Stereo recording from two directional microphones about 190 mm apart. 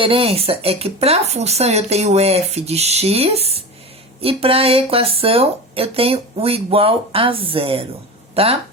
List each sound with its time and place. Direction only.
0.0 s speech: 30° right (ahead or behind)